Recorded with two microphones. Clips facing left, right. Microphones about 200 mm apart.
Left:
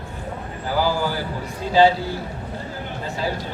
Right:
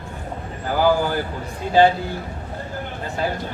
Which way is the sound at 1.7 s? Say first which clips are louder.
Even; 55° right (ahead or behind).